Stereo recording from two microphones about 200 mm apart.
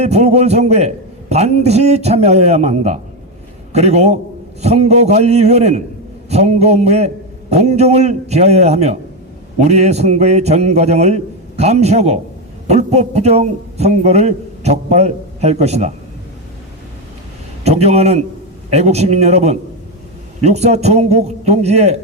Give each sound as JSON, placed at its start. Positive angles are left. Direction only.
{"t": 0.0, "sound": "a man's voice", "side_deg": -35}
{"t": 17.6, "sound": "a man's voice", "side_deg": -30}